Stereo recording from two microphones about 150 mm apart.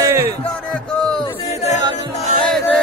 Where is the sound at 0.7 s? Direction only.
5° left (ahead or behind).